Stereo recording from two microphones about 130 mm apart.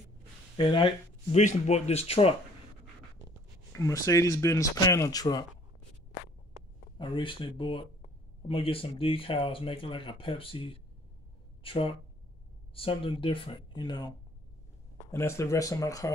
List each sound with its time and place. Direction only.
0.6 s speech: 35° left (ahead or behind)
1.3 s speech: 65° left (ahead or behind); by 2.3 s 50° left (ahead or behind)
3.7 s speech: 25° left (ahead or behind)
7.0 s speech: 40° left (ahead or behind)
15.0 s speech: 20° left (ahead or behind)